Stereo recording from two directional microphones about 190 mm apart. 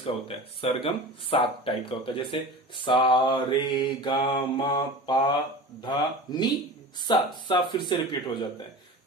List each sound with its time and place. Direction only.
0.0 s speech: 30° left (ahead or behind)